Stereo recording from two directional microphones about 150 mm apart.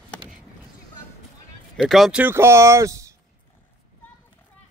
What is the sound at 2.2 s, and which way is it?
Speech, 15° right (ahead or behind).